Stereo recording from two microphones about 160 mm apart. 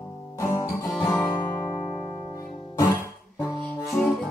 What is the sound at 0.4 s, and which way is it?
Guitar, 20° left (ahead or behind).